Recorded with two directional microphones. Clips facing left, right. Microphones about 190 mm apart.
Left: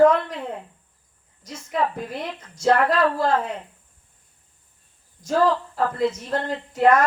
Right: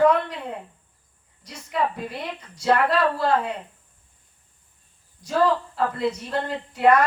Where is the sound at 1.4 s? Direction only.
45° left (ahead or behind).